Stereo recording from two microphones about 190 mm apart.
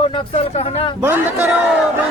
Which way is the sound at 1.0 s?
10° right (ahead or behind).